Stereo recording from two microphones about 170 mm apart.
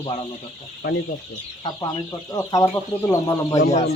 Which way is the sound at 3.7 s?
40° left (ahead or behind).